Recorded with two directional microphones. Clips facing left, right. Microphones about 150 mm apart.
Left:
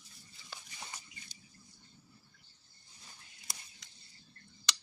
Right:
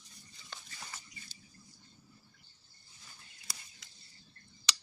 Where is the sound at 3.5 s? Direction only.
25° left (ahead or behind).